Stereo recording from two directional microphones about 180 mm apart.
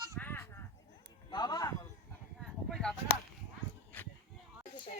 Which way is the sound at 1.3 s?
25° left (ahead or behind).